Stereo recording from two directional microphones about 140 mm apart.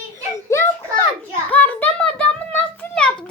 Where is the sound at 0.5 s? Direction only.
20° left (ahead or behind).